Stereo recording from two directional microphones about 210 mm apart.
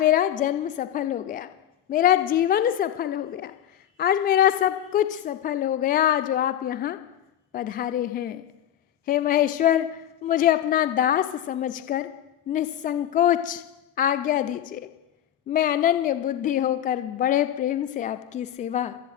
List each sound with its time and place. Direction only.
0.0 s a woman's voice: 40° left (ahead or behind)